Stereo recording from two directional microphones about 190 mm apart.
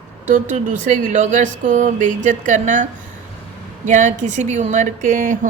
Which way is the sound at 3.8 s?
40° right (ahead or behind).